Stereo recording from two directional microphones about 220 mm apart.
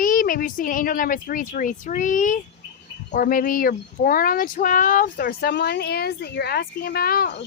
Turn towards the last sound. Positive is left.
turn(degrees=45)  # may be behind; listen again after turning